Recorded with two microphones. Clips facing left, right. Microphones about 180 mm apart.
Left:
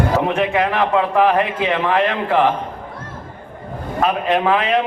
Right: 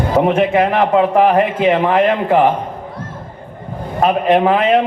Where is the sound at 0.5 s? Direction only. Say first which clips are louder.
Right 4 dB; 45° right (ahead or behind).